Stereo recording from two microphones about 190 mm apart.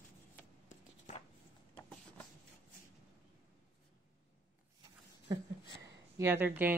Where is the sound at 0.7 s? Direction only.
35° left (ahead or behind).